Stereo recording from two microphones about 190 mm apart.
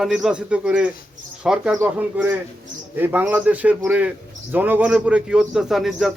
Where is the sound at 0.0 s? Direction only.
5° right (ahead or behind).